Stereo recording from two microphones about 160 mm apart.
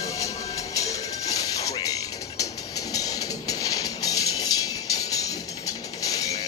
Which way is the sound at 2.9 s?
20° left (ahead or behind).